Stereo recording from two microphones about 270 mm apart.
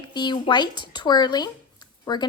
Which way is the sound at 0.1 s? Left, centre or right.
Centre.